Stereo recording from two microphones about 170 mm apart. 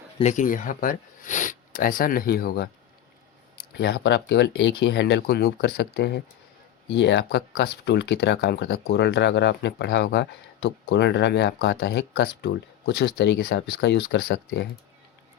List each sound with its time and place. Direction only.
0.2 s speech: 45° left (ahead or behind); by 2.6 s 65° left (ahead or behind)
3.8 s speech: 85° left
4.8 s speech: 80° left
6.9 s speech: 90° left; by 14.7 s 70° left (ahead or behind)